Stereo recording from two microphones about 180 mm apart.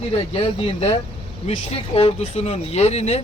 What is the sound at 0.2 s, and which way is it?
Speech, 30° left (ahead or behind).